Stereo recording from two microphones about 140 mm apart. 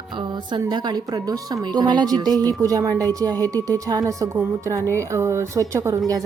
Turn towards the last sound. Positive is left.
turn(degrees=-25)  # may be behind; listen again after turning